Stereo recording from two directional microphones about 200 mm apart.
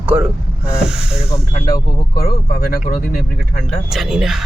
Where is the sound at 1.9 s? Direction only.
50° left (ahead or behind).